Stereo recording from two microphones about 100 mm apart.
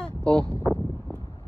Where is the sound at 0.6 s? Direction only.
Centre (ahead or behind).